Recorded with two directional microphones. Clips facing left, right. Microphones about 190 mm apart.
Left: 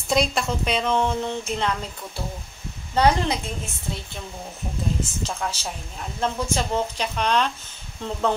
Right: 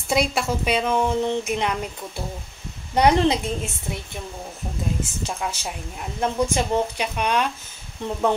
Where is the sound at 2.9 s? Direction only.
20° right (ahead or behind).